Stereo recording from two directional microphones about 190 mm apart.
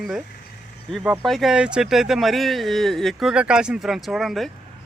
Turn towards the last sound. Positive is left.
turn(degrees=0)  # may be behind; listen again after turning